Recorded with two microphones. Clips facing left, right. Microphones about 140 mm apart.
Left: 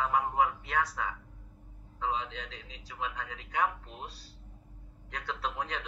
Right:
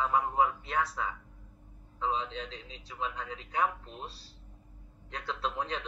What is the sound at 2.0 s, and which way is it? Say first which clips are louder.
A man's voice: right 1 dB; 30° right (ahead or behind).